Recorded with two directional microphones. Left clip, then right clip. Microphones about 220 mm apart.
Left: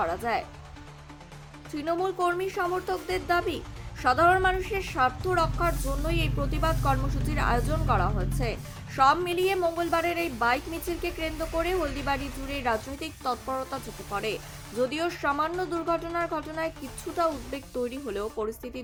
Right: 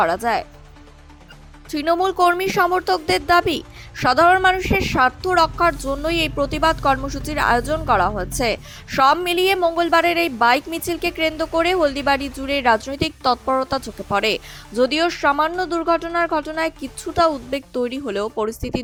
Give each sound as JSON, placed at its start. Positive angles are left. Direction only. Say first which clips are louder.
{"t": 0.0, "sound": "a woman's voice", "louder": "right 9 dB", "side_deg": -35}
{"t": 1.7, "sound": "a woman's voice", "louder": "right 10 dB", "side_deg": -40}